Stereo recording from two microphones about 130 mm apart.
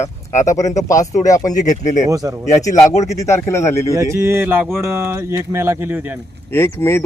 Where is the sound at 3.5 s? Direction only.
20° left (ahead or behind).